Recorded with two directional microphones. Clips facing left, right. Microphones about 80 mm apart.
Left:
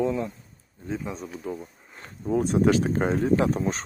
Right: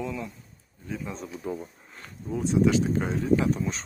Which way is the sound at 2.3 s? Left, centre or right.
Left.